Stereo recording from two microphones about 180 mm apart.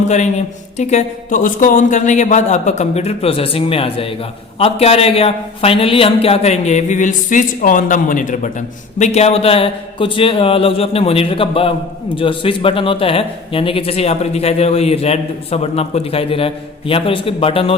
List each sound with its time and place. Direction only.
0.0 s speech: 40° left (ahead or behind)